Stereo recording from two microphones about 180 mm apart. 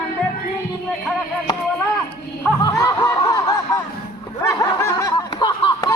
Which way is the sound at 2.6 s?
20° left (ahead or behind).